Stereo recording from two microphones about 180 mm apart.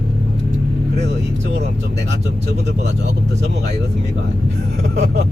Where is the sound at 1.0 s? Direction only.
80° right.